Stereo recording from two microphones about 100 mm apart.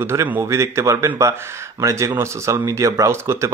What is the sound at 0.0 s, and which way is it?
Speech, 30° right (ahead or behind).